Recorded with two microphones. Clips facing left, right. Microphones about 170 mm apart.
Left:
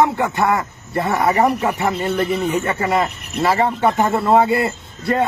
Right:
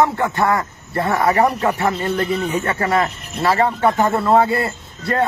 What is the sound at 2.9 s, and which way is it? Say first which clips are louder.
Speech: even; 15° left (ahead or behind).